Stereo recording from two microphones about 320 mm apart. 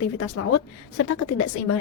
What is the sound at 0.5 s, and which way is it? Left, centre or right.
Speech, left.